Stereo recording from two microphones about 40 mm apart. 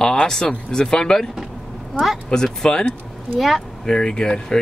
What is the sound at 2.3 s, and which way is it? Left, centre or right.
Speech, left.